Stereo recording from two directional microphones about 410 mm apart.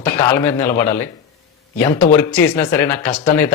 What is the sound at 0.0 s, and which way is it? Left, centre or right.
Speech, centre.